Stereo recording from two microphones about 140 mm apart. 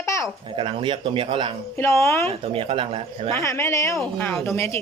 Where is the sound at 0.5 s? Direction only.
35° right (ahead or behind).